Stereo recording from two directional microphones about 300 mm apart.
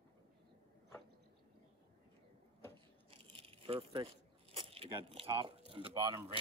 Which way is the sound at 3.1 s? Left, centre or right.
Centre.